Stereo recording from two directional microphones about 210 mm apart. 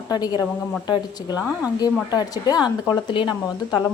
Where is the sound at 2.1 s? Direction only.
20° left (ahead or behind).